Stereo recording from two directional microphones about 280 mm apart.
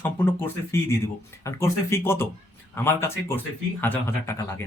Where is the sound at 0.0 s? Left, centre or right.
Centre.